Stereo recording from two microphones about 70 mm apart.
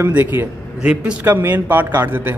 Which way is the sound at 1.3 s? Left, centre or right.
Right.